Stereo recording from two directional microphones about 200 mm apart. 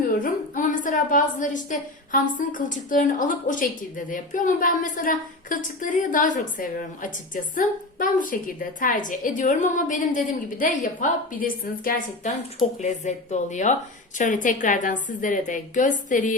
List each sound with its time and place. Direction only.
0.1 s a woman's voice: 40° left (ahead or behind)